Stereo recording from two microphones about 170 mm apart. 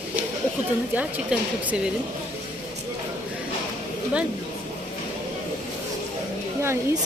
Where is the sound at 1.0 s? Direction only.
10° right (ahead or behind).